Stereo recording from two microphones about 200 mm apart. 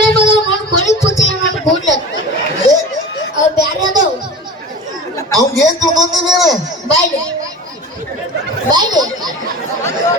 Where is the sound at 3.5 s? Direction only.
20° right (ahead or behind).